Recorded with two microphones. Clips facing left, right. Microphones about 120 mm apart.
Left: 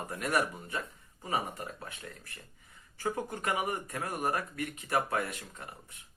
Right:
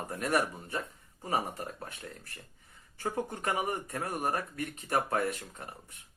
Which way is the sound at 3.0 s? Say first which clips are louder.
Even; 30° right (ahead or behind).